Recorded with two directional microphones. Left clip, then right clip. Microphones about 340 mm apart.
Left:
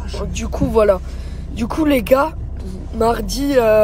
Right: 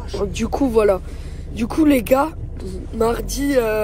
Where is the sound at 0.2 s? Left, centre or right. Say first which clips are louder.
Right 3 dB; centre.